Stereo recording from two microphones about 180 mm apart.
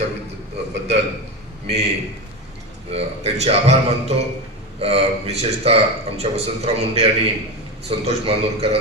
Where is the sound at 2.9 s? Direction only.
35° right (ahead or behind).